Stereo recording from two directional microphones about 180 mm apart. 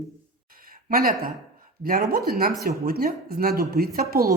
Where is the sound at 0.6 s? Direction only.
55° right (ahead or behind).